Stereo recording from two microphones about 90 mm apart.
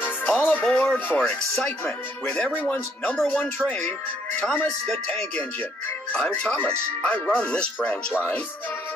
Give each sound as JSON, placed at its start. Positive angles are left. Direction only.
{"t": 0.4, "sound": "music", "side_deg": 20}
{"t": 2.2, "sound": "speech", "side_deg": 15}
{"t": 6.1, "sound": "speech", "side_deg": 10}